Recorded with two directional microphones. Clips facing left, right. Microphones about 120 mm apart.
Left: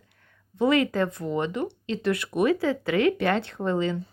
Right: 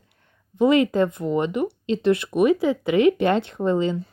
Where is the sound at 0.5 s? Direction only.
20° right (ahead or behind).